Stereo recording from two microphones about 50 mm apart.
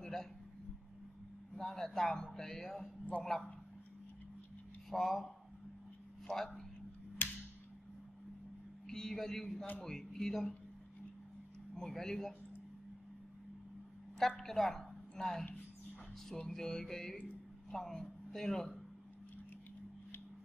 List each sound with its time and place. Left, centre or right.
0.0 s a sound: centre
1.5 s a man's voice: centre
4.8 s a man's voice: centre
7.2 s a sound: left
8.8 s a man's voice: centre
11.9 s speech: centre
14.1 s a woman's voice: centre
16.4 s a man's voice: centre